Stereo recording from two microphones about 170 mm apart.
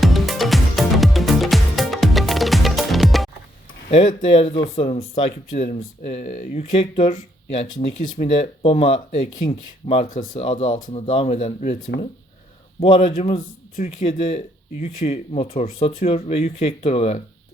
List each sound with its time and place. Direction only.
0.0 s music: centre (ahead or behind)
3.9 s speech: 40° left (ahead or behind)
6.0 s speech: 45° left (ahead or behind)
10.1 s speech: 50° left (ahead or behind)
10.4 s speech: 30° left (ahead or behind)
10.7 s speech: 50° left (ahead or behind)
10.9 s speech: 35° left (ahead or behind)
12.8 s speech: 35° left (ahead or behind)